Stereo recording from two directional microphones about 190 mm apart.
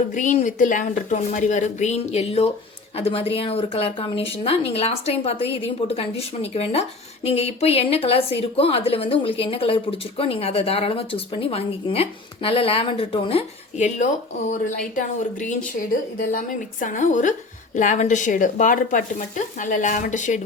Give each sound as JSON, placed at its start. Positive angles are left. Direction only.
{"t": 0.1, "sound": "a woman's voice", "side_deg": 40}